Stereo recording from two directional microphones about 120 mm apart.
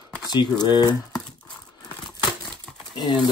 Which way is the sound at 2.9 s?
35° left (ahead or behind).